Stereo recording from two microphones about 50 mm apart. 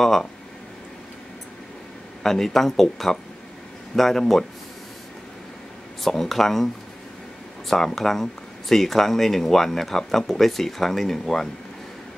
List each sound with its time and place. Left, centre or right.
0.0 s speech: centre
2.2 s speech: centre
6.0 s speech: centre